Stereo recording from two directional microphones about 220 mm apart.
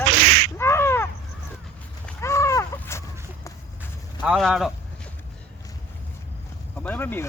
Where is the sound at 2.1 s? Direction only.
15° left (ahead or behind).